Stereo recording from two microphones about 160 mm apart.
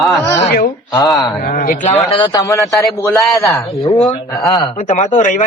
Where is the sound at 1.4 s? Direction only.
65° left (ahead or behind).